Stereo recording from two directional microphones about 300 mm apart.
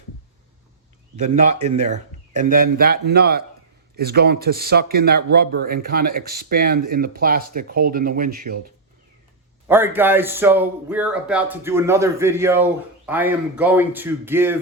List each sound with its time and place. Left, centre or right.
1.6 s a man's voice: right
9.6 s a man's voice: centre